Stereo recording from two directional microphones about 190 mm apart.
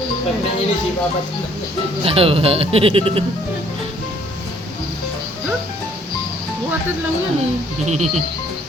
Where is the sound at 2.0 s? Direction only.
30° right (ahead or behind).